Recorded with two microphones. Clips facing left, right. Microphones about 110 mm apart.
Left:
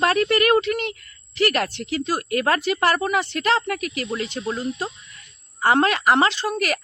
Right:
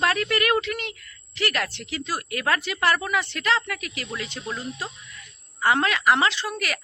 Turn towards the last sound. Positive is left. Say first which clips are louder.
# left 4 dB
turn(degrees=45)  # may be behind; listen again after turning